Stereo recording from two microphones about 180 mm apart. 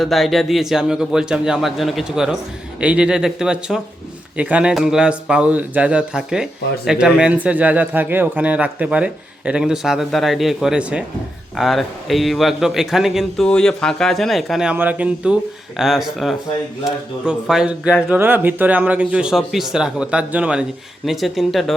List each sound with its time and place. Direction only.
0.0 s speech: centre (ahead or behind)